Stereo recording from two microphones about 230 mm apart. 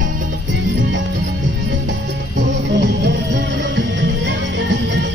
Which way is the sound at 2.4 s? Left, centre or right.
Right.